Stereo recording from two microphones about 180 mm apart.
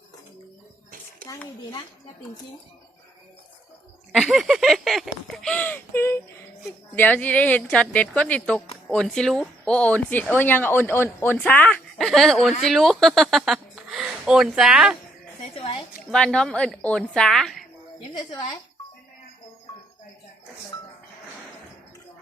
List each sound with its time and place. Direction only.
1.3 s speech: 20° left (ahead or behind)
4.1 s speech: centre (ahead or behind)
16.1 s speech: 5° left (ahead or behind)
18.1 s speech: 25° left (ahead or behind)